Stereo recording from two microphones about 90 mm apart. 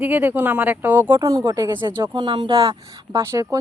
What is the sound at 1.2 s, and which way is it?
Speech, 40° right (ahead or behind).